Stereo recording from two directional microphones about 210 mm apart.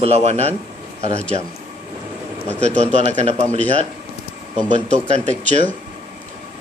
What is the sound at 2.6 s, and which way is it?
Speech, 30° right (ahead or behind).